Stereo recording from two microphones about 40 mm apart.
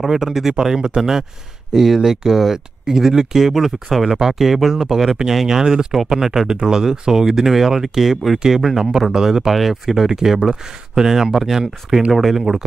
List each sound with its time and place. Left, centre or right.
0.0 s speech: centre